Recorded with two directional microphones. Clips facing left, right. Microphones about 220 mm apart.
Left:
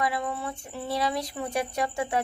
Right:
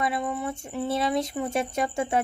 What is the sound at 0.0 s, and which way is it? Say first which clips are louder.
Speech: right 2 dB; 20° right (ahead or behind).